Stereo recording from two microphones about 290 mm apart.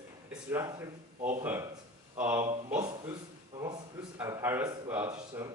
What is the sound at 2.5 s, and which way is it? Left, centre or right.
A man's voice, right.